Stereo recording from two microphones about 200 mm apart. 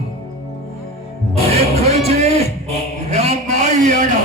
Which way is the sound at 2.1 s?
30° right (ahead or behind).